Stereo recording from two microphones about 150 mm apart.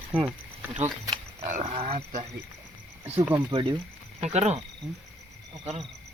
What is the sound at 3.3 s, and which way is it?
Speech, 30° right (ahead or behind).